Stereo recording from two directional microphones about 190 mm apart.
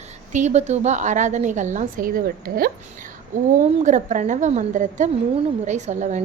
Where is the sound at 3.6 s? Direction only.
40° right (ahead or behind).